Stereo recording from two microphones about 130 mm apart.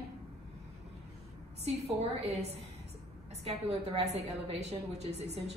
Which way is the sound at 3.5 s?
55° right (ahead or behind).